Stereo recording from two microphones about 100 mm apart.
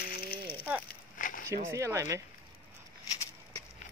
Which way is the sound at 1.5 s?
30° right (ahead or behind).